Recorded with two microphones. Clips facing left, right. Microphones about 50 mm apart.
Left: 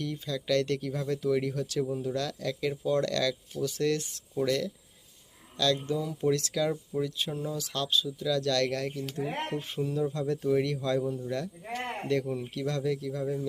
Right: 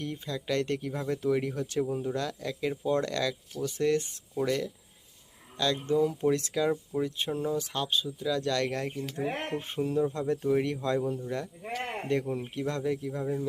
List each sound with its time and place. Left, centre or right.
0.0 s speech: right
5.8 s speech: right
6.3 s speech: right
7.4 s speech: right